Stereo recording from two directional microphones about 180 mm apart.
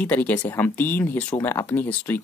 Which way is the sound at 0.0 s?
10° left (ahead or behind).